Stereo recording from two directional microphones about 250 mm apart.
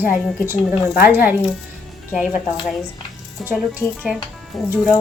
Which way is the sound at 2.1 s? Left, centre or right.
Centre.